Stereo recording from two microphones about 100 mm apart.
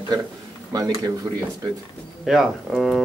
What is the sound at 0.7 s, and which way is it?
Speech, 40° right (ahead or behind).